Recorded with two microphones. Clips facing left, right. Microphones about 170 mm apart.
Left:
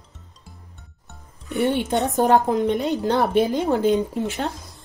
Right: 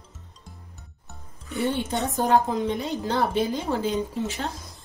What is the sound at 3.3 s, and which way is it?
Speech, 55° left (ahead or behind).